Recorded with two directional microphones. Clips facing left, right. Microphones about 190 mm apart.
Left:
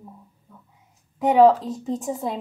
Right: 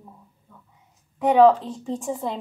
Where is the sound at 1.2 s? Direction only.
5° left (ahead or behind).